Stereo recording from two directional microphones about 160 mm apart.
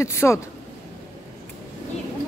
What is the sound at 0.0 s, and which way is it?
Speech, 15° left (ahead or behind).